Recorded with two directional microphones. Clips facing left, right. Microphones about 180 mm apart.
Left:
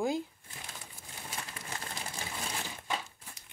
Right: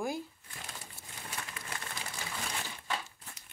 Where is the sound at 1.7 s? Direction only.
25° left (ahead or behind).